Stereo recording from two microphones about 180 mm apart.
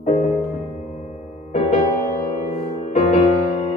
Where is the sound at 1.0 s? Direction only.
35° left (ahead or behind).